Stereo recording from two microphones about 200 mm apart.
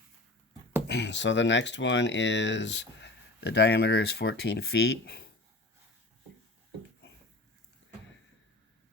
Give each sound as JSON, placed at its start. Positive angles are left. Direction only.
{"t": 0.9, "sound": "speech", "side_deg": 60}